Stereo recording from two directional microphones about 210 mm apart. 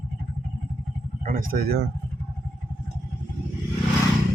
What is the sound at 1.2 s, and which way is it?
Speech, 40° right (ahead or behind).